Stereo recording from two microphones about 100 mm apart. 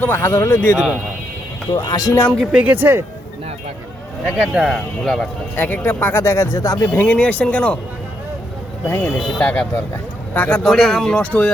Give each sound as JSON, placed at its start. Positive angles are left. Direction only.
{"t": 0.0, "sound": "speech", "side_deg": 20}
{"t": 1.7, "sound": "speech", "side_deg": 40}
{"t": 2.5, "sound": "speech", "side_deg": -15}
{"t": 4.3, "sound": "speech", "side_deg": -10}
{"t": 5.5, "sound": "speech", "side_deg": 20}
{"t": 6.8, "sound": "speech", "side_deg": 20}
{"t": 8.9, "sound": "speech", "side_deg": 25}
{"t": 9.4, "sound": "speech", "side_deg": 15}
{"t": 10.6, "sound": "speech", "side_deg": 5}